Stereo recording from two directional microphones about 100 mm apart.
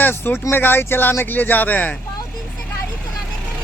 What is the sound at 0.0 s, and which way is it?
Speech, 20° left (ahead or behind).